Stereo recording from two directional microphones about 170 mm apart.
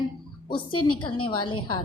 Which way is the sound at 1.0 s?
30° left (ahead or behind).